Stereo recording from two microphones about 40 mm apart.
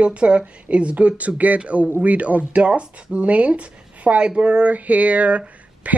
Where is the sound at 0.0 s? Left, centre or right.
Right.